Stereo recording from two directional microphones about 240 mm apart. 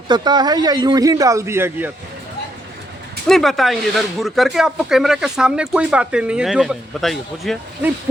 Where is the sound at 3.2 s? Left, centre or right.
Centre.